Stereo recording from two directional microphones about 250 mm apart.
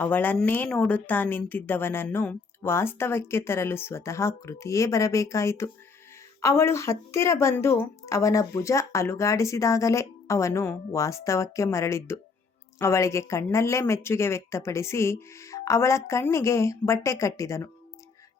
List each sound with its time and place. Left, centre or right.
0.0 s a woman's voice: centre